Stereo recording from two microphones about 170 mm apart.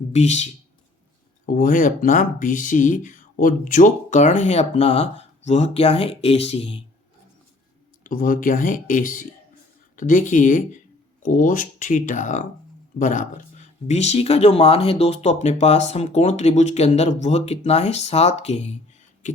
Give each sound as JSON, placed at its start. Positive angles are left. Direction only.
{"t": 0.1, "sound": "speech", "side_deg": 40}
{"t": 1.5, "sound": "speech", "side_deg": 55}
{"t": 8.0, "sound": "speech", "side_deg": 55}
{"t": 19.2, "sound": "a sound", "side_deg": 45}